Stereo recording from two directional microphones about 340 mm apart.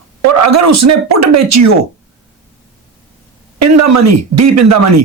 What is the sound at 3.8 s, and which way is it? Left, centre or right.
Speech, right.